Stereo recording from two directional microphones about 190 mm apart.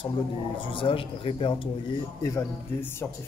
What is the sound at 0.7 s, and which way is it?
Speech, 30° left (ahead or behind).